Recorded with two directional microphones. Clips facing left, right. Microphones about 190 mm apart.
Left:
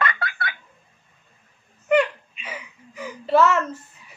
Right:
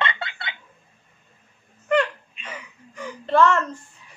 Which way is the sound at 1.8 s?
10° left (ahead or behind).